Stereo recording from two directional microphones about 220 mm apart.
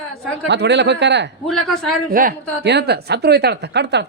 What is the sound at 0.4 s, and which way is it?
Speech, 50° right (ahead or behind).